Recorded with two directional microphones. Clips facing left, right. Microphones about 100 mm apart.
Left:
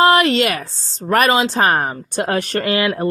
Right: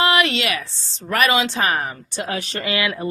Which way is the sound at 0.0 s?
40° left (ahead or behind).